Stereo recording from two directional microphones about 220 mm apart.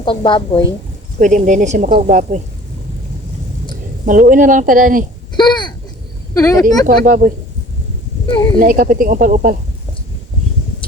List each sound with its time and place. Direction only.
0.0 s a woman's voice: 20° left (ahead or behind)
1.2 s speech: 35° right (ahead or behind)
4.0 s speech: 35° right (ahead or behind)
5.4 s a sound: 20° left (ahead or behind)
6.3 s speech: 15° left (ahead or behind)
6.8 s speech: 40° right (ahead or behind)
8.5 s speech: 40° right (ahead or behind)